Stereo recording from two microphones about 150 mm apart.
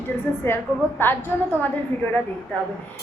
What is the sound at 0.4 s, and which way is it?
A child's voice, 15° left (ahead or behind).